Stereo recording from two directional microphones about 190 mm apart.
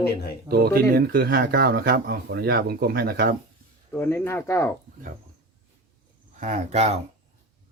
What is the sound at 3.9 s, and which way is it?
Speech, 10° left (ahead or behind).